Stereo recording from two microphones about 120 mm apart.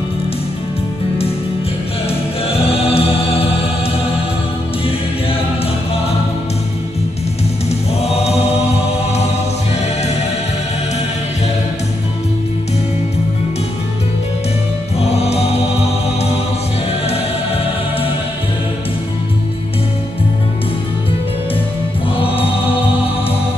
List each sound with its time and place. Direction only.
2.0 s choir: 55° left (ahead or behind)
8.0 s choir: 60° left (ahead or behind)
15.0 s music: 60° left (ahead or behind)